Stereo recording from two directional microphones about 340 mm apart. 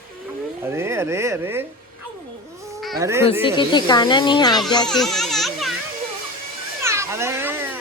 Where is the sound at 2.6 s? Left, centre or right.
Centre.